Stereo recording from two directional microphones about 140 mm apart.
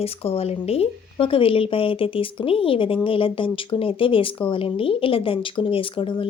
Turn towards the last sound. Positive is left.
turn(degrees=40)  # may be behind; listen again after turning